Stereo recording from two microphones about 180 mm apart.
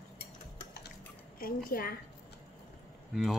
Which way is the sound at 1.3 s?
55° left (ahead or behind).